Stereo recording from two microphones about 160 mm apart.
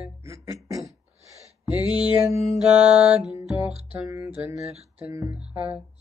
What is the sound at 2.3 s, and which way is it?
Mantra, 45° left (ahead or behind).